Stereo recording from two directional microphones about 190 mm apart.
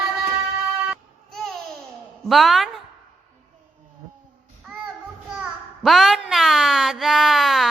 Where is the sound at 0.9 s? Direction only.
Centre (ahead or behind).